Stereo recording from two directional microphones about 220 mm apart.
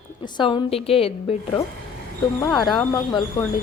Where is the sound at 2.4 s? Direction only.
15° left (ahead or behind).